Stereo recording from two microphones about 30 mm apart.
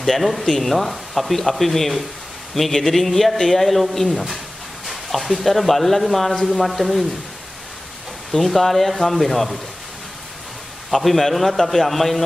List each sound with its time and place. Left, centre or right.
0.0 s a man's voice: centre
8.3 s speech: centre
10.9 s speech: centre